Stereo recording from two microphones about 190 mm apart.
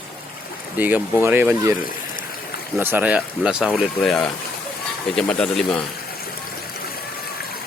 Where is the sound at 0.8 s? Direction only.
10° right (ahead or behind).